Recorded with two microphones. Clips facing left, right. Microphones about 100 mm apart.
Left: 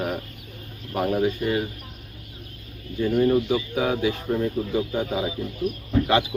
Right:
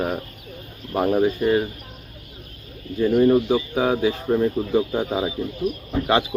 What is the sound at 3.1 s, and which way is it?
Speech, 40° right (ahead or behind).